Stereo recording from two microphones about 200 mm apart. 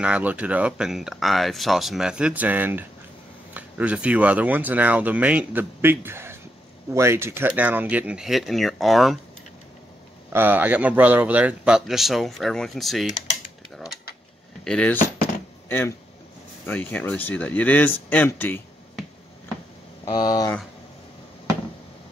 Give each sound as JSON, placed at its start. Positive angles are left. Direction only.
{"t": 0.0, "sound": "speech", "side_deg": -5}
{"t": 10.3, "sound": "speech", "side_deg": -10}
{"t": 14.6, "sound": "speech", "side_deg": 5}
{"t": 16.6, "sound": "speech", "side_deg": 10}
{"t": 20.1, "sound": "speech", "side_deg": 20}